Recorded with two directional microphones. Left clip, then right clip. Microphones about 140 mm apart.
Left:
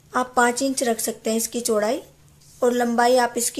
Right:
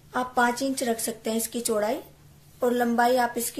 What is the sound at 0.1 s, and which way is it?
Speech, 55° left (ahead or behind).